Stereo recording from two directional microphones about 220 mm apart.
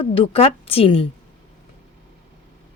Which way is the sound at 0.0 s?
25° left (ahead or behind).